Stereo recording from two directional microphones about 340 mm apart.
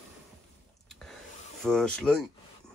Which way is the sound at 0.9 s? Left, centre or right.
Centre.